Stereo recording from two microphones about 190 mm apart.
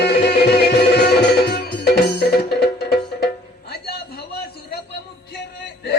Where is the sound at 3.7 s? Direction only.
55° left (ahead or behind).